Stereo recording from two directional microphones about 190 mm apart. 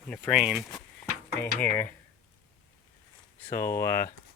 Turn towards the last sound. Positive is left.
turn(degrees=15)  # may be behind; listen again after turning